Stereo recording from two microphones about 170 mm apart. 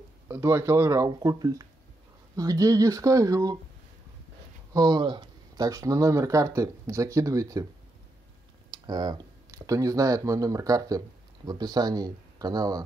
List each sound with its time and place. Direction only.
0.3 s speech: 15° right (ahead or behind)
4.7 s speech: 25° right (ahead or behind)
8.6 s speech: 25° right (ahead or behind)